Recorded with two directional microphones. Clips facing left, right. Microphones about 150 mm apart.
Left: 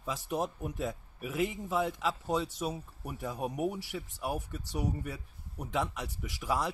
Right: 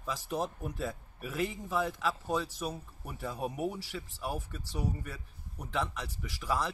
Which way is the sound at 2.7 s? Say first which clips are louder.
Left 3 dB; 10° left (ahead or behind).